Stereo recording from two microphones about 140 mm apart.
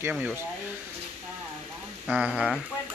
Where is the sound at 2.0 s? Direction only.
5° right (ahead or behind).